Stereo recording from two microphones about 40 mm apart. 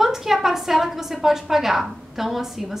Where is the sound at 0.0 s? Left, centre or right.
Centre.